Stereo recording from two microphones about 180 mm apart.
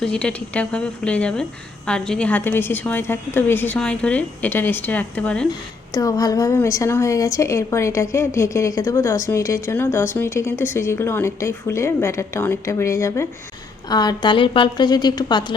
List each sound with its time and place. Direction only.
0.0 s a woman's voice: 5° left (ahead or behind)
5.5 s a woman's voice: 20° left (ahead or behind)